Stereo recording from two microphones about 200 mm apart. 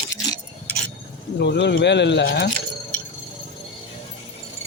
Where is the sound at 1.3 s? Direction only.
55° left (ahead or behind).